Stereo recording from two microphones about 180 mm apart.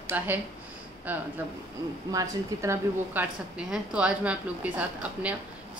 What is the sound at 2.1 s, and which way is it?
A woman's voice, 20° right (ahead or behind).